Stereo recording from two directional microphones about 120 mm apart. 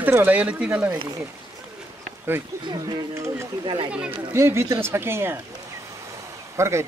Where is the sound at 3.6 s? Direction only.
50° right (ahead or behind).